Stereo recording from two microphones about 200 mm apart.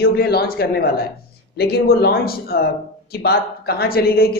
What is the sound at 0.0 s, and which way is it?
A woman's voice, 50° left (ahead or behind).